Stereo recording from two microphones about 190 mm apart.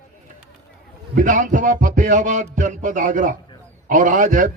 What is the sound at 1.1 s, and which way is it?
A man's voice, 45° right (ahead or behind).